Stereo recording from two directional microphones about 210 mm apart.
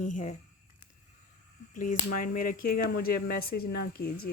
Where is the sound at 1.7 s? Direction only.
40° left (ahead or behind).